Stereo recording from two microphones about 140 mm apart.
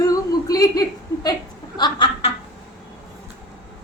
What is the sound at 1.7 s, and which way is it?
Chuckle, 35° left (ahead or behind).